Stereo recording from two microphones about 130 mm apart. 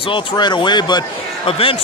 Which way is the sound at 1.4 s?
45° left (ahead or behind).